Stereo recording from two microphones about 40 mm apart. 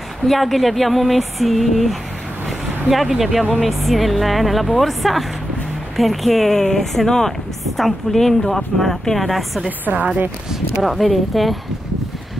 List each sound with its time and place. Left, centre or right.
0.2 s a woman's voice: centre
9.7 s a woman's voice: right
10.8 s a woman's voice: centre